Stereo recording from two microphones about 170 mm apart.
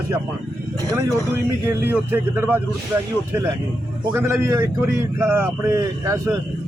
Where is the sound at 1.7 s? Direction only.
15° right (ahead or behind).